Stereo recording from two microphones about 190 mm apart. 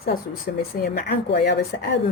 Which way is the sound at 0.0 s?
55° left (ahead or behind).